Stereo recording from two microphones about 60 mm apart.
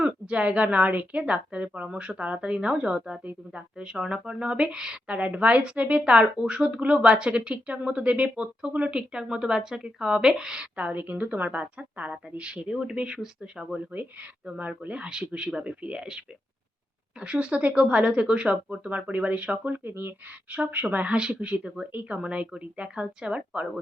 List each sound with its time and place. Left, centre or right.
0.0 s a woman's voice: right
10.8 s speech: right
13.9 s speech: right
20.9 s speech: right